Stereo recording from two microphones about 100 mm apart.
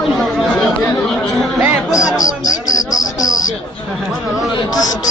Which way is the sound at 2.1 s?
35° left (ahead or behind).